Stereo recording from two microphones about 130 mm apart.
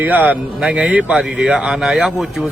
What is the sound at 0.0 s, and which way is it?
Speech, 10° right (ahead or behind).